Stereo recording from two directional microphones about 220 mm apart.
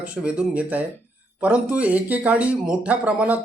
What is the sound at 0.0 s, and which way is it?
Speech, 5° right (ahead or behind).